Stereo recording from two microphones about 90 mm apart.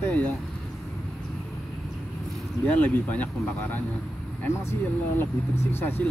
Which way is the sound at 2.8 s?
20° left (ahead or behind).